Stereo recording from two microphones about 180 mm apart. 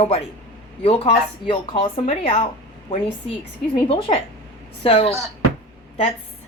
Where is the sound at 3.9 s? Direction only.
30° left (ahead or behind).